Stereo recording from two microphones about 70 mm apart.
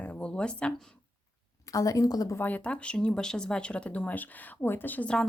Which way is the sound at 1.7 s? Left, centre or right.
Left.